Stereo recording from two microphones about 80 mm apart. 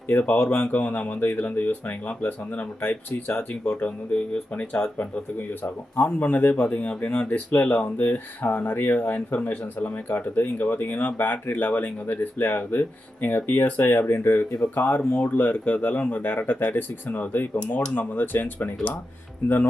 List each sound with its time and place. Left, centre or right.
0.1 s speech: left